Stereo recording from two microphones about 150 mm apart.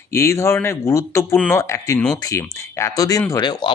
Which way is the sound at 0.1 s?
20° left (ahead or behind).